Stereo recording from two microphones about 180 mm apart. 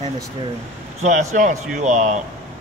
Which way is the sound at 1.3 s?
40° right (ahead or behind).